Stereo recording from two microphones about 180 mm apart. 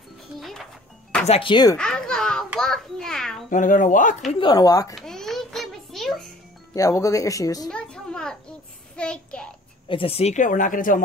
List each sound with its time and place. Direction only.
0.4 s music: centre (ahead or behind)
1.2 s speech: 30° left (ahead or behind)
1.8 s a sound: 5° left (ahead or behind)
3.4 s speech: 45° left (ahead or behind)
4.3 s speech: 25° left (ahead or behind)
4.9 s a sound: centre (ahead or behind)
6.7 s speech: 20° left (ahead or behind)
7.7 s a sound: 5° left (ahead or behind)
8.9 s child singing: 5° left (ahead or behind)
9.8 s speech: 30° left (ahead or behind); by 11.0 s 50° left (ahead or behind)